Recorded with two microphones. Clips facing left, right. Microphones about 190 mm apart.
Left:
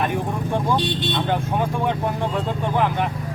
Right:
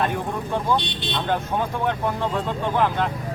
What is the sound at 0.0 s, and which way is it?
Speech, 15° left (ahead or behind).